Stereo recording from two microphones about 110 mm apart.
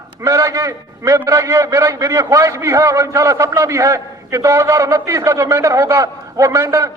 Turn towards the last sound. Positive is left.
turn(degrees=-30)  # may be behind; listen again after turning